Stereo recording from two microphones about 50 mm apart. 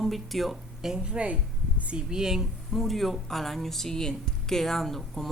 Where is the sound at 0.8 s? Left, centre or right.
Centre.